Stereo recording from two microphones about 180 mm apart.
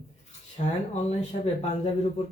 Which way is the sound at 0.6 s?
40° left (ahead or behind).